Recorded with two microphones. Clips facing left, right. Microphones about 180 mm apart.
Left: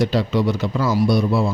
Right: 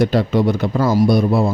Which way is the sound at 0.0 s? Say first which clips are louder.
Right 3 dB; 50° right (ahead or behind).